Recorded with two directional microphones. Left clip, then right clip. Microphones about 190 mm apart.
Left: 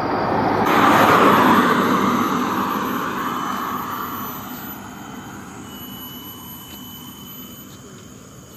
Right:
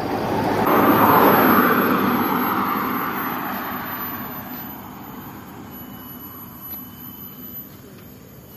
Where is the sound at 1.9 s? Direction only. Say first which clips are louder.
Left 1 dB; 10° left (ahead or behind).